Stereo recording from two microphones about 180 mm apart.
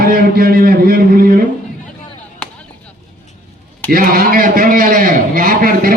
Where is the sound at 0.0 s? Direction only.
55° right (ahead or behind).